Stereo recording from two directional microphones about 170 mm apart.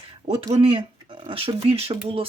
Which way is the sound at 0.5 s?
35° right (ahead or behind).